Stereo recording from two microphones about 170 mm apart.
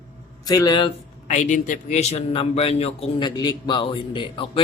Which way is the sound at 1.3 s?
45° left (ahead or behind).